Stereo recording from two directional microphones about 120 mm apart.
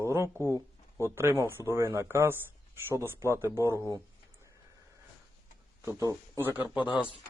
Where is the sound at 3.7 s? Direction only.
25° left (ahead or behind).